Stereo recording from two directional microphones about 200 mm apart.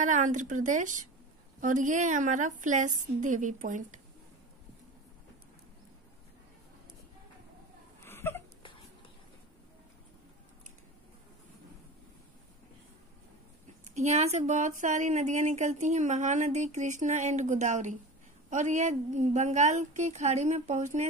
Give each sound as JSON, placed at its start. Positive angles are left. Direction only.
{"t": 0.0, "sound": "speech", "side_deg": -40}
{"t": 8.0, "sound": "hiccup", "side_deg": 10}
{"t": 13.9, "sound": "speech", "side_deg": -35}